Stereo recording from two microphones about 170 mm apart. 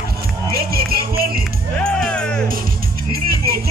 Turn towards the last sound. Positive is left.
turn(degrees=-65)  # may be behind; listen again after turning